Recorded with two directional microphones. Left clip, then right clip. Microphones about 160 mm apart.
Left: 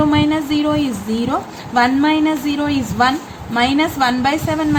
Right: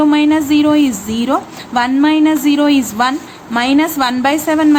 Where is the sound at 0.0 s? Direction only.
25° right (ahead or behind).